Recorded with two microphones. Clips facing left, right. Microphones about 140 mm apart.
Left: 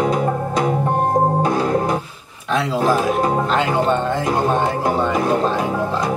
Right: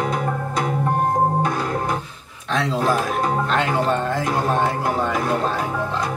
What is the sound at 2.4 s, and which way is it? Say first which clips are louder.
Speech: left 3 dB; 5° left (ahead or behind).